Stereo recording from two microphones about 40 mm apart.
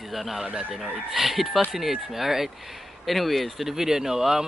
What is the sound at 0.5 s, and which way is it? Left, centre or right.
Speech, centre.